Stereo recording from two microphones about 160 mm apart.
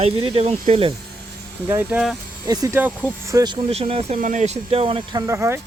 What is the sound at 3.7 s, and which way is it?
Speech, 40° right (ahead or behind).